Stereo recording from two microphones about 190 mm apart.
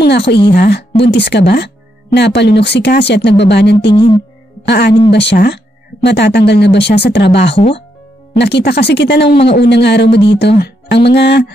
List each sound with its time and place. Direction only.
0.0 s speech: 60° left (ahead or behind)
3.9 s speech: 25° left (ahead or behind)
4.6 s speech: 65° left (ahead or behind)
10.6 s music: 60° left (ahead or behind)